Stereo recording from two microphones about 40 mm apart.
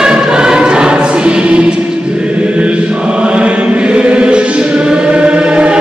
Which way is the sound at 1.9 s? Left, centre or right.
Right.